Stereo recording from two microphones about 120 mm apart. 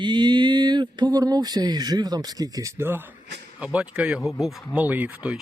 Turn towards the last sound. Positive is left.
turn(degrees=-10)  # may be behind; listen again after turning